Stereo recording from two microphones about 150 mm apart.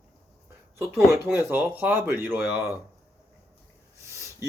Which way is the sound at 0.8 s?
15° right (ahead or behind).